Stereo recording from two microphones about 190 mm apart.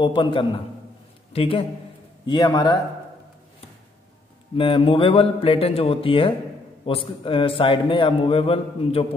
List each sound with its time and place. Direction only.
0.0 s a man's voice: 25° left (ahead or behind)
4.6 s a man's voice: 25° left (ahead or behind)